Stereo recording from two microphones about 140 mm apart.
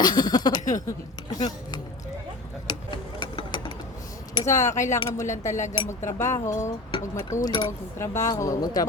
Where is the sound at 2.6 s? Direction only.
30° left (ahead or behind).